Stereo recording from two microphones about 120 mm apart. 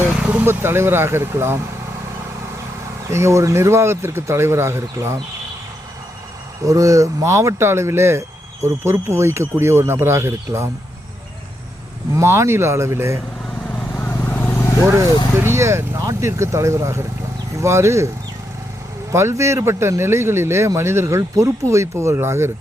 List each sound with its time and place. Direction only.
0.2 s speech: 15° right (ahead or behind)
3.1 s speech: 25° right (ahead or behind)
6.7 s speech: 30° right (ahead or behind)
12.1 s speech: 25° right (ahead or behind)
13.7 s vehicle: 10° left (ahead or behind)
15.4 s speech: 20° right (ahead or behind)
19.1 s speech: 25° right (ahead or behind)